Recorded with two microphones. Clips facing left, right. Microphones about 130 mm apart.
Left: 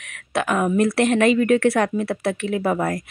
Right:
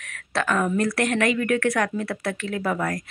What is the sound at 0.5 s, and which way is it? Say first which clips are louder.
A woman's voice: left 4 dB; 20° left (ahead or behind).